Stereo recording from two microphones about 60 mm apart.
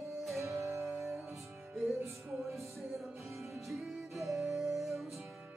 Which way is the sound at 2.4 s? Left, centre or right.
Centre.